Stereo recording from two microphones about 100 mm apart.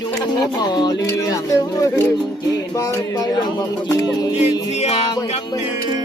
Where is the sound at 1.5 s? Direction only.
35° left (ahead or behind).